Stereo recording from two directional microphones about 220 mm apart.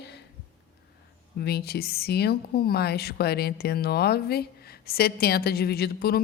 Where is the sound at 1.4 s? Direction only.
45° left (ahead or behind).